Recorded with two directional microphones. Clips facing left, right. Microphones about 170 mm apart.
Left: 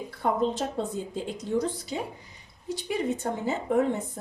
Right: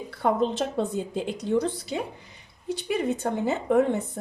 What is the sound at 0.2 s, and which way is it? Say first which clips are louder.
A woman's voice: right 2 dB; 65° right (ahead or behind).